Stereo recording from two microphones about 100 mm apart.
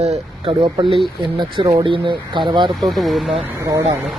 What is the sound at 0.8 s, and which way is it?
Speech, 60° right (ahead or behind).